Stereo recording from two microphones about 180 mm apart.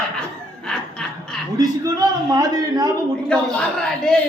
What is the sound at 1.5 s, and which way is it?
A man's voice, 20° right (ahead or behind).